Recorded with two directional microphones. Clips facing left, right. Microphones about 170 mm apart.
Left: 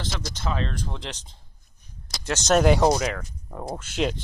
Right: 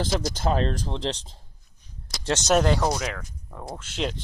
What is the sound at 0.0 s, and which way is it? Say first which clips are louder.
Speech: right 6 dB; 40° right (ahead or behind).